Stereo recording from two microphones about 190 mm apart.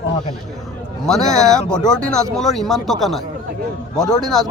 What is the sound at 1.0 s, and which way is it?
Speech, 5° left (ahead or behind).